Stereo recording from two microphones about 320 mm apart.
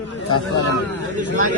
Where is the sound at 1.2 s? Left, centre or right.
Right.